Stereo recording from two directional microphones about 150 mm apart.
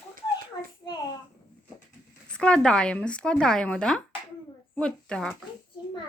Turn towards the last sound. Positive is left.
turn(degrees=5)  # may be behind; listen again after turning